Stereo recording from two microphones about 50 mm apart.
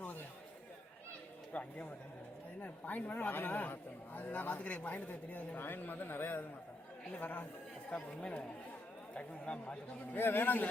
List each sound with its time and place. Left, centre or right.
1.5 s speech: left
5.5 s a man's voice: left
7.1 s speech: left
7.9 s speech: left
10.2 s a man's voice: left